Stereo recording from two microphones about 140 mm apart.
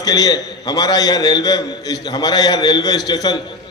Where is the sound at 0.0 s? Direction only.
25° left (ahead or behind).